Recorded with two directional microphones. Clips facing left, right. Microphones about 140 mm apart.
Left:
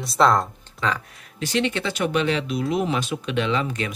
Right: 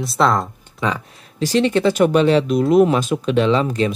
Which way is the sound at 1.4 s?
35° right (ahead or behind).